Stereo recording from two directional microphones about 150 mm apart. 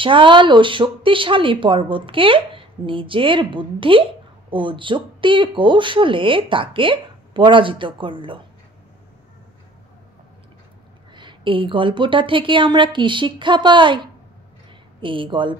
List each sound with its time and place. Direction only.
0.0 s speech: 35° right (ahead or behind)
11.1 s speech: 35° right (ahead or behind)